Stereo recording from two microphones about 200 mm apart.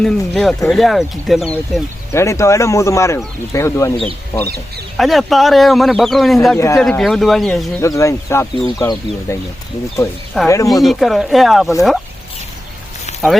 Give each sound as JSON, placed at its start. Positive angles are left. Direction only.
{"t": 0.0, "sound": "speech", "side_deg": 0}
{"t": 2.1, "sound": "speech", "side_deg": 15}
{"t": 4.9, "sound": "speech", "side_deg": 0}
{"t": 6.6, "sound": "speech", "side_deg": 15}
{"t": 6.8, "sound": "speech", "side_deg": 5}
{"t": 7.8, "sound": "speech", "side_deg": 15}
{"t": 10.3, "sound": "speech", "side_deg": 0}